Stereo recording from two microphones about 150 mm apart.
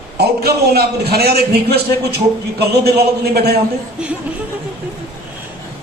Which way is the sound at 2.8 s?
90° right.